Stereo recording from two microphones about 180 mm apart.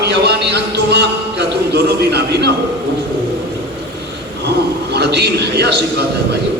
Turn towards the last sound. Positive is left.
turn(degrees=-65)  # may be behind; listen again after turning